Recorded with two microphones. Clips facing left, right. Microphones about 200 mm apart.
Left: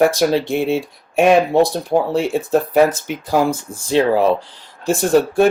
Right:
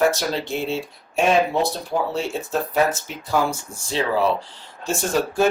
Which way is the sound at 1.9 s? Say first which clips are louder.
Left 7 dB; 50° left (ahead or behind).